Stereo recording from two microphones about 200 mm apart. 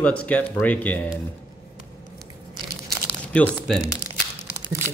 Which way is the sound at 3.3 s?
5° left (ahead or behind).